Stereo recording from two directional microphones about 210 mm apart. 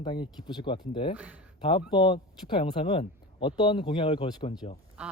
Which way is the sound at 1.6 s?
25° left (ahead or behind).